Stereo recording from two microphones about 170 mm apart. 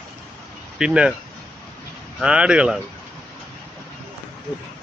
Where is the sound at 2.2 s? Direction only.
5° right (ahead or behind).